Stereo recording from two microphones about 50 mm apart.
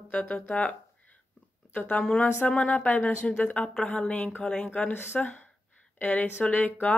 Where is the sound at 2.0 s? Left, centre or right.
Centre.